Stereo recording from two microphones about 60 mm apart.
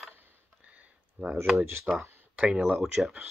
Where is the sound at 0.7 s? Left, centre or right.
Right.